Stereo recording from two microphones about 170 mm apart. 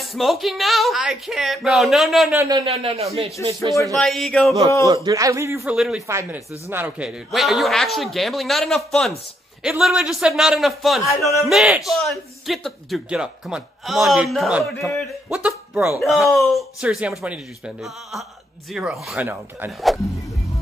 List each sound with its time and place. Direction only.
0.0 s a man's voice: centre (ahead or behind)
2.3 s a man's voice: 20° right (ahead or behind)
2.6 s speech: 35° right (ahead or behind)
3.9 s a man's voice: centre (ahead or behind)
4.8 s a man's voice: 20° right (ahead or behind)
5.8 s a man's voice: centre (ahead or behind)
6.0 s a man's voice: 15° right (ahead or behind); by 11.0 s centre (ahead or behind)
11.0 s music: 20° left (ahead or behind)
11.4 s a man's voice: centre (ahead or behind)